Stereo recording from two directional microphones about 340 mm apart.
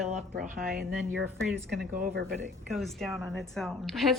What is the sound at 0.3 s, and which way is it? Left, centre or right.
Speech, right.